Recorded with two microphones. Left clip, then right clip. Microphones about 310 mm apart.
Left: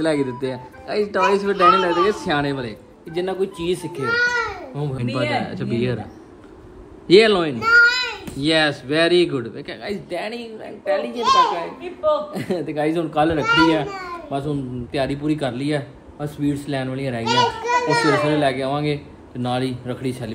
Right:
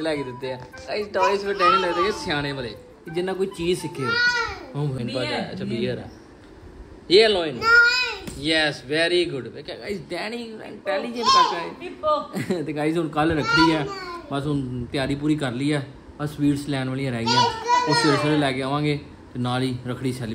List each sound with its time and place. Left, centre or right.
0.2 s a child's voice: centre
5.4 s speech: centre
7.1 s speech: centre
7.9 s a sound: centre
8.4 s speech: centre
10.0 s speech: centre
12.3 s a child's voice: centre